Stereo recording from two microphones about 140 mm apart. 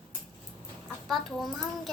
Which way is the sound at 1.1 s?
Centre (ahead or behind).